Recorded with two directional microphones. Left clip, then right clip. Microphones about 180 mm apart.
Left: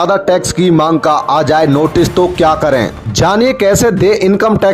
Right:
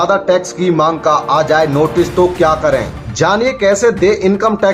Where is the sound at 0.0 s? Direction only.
45° left (ahead or behind).